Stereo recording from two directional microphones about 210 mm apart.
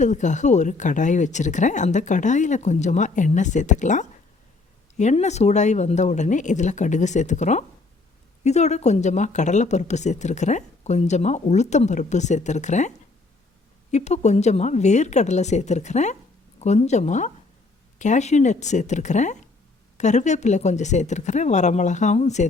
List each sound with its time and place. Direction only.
0.0 s speech: 35° left (ahead or behind)
13.9 s speech: 35° left (ahead or behind)